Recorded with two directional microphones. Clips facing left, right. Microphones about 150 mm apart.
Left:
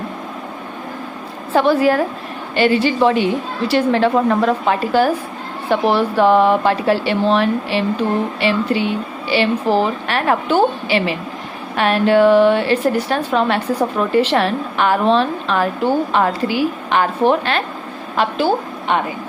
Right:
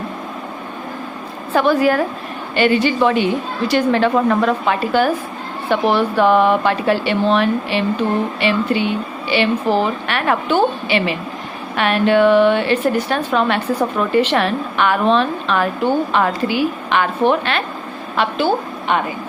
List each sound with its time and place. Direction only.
1.5 s a woman's voice: 30° left (ahead or behind)